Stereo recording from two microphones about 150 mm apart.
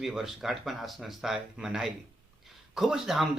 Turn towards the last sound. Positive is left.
turn(degrees=0)  # may be behind; listen again after turning